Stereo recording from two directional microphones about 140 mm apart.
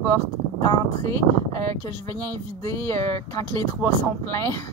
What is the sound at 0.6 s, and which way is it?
Speech, 25° left (ahead or behind).